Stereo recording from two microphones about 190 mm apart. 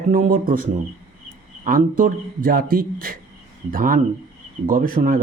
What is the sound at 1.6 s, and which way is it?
Speech, 45° right (ahead or behind).